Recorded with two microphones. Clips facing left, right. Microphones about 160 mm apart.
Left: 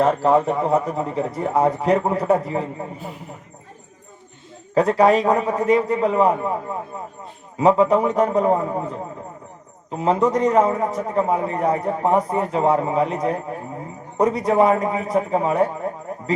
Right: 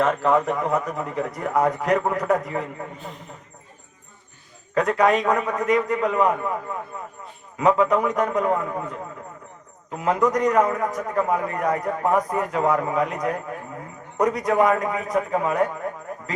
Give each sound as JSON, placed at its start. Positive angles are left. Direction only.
{"t": 0.0, "sound": "a man's voice", "side_deg": 35}
{"t": 3.0, "sound": "speech", "side_deg": 5}
{"t": 4.7, "sound": "a man's voice", "side_deg": 30}